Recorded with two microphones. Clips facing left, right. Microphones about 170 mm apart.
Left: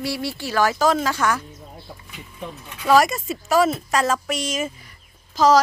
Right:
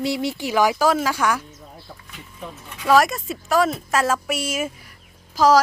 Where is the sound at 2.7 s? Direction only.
Centre (ahead or behind).